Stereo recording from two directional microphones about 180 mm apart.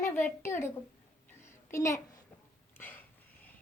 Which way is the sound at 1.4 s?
15° left (ahead or behind).